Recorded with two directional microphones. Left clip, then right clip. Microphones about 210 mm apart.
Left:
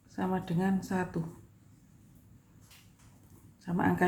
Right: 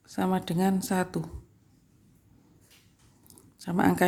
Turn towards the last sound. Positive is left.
turn(degrees=-45)  # may be behind; listen again after turning